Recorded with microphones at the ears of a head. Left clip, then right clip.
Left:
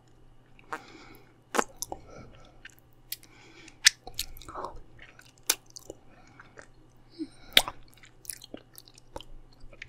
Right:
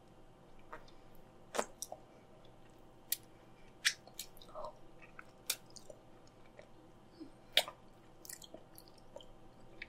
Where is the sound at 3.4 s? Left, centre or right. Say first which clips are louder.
Left 13 dB; left.